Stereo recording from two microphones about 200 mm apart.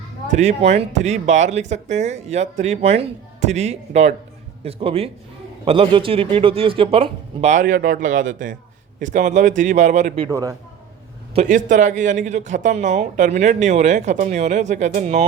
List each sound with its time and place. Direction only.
0.3 s speech: 35° right (ahead or behind)
10.2 s a man's voice: 15° right (ahead or behind)
11.3 s speech: 40° right (ahead or behind)